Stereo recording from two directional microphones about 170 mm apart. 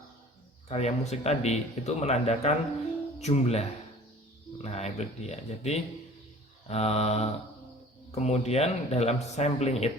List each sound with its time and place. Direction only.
0.7 s speech: 40° left (ahead or behind)